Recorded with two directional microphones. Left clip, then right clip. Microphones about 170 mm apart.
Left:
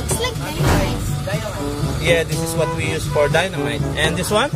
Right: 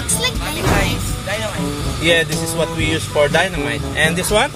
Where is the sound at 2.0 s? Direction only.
10° right (ahead or behind).